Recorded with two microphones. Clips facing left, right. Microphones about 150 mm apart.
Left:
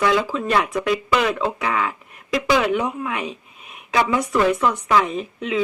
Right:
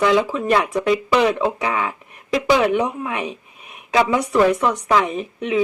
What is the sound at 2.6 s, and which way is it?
Speech, 40° right (ahead or behind).